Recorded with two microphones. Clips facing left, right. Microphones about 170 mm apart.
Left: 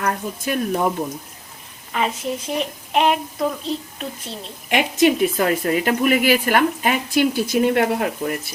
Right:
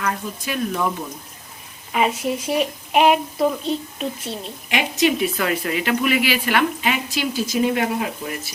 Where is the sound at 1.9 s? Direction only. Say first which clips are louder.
Right 2 dB; 10° right (ahead or behind).